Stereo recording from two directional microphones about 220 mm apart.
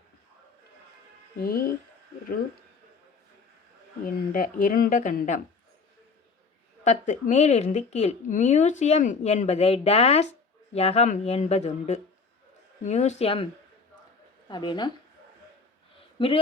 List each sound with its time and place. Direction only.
1.4 s speech: 40° left (ahead or behind)
4.0 s speech: 40° left (ahead or behind)
6.8 s speech: 35° left (ahead or behind)
16.1 s speech: 25° left (ahead or behind)